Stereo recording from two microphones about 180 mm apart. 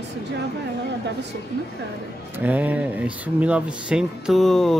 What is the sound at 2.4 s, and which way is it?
Speech, 10° right (ahead or behind).